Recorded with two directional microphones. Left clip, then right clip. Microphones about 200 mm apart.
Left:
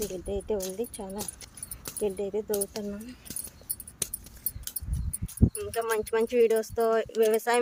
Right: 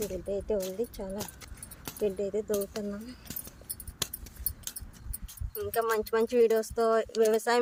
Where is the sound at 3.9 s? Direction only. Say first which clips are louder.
Right 3 dB; 25° right (ahead or behind).